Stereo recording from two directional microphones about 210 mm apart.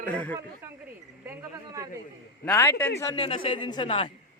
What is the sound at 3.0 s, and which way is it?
Speech, 20° left (ahead or behind).